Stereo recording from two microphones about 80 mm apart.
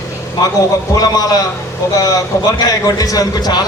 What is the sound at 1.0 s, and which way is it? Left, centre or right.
Speech, left.